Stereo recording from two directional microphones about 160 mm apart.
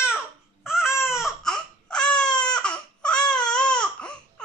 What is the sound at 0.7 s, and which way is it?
Baby cry, 5° right (ahead or behind).